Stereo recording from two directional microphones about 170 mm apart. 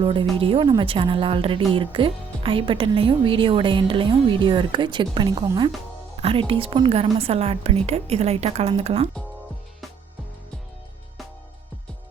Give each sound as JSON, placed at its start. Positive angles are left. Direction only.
{"t": 0.0, "sound": "a woman's voice", "side_deg": -30}